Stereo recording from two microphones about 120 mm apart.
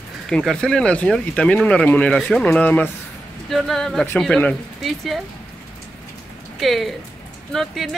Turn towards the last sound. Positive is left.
turn(degrees=0)  # may be behind; listen again after turning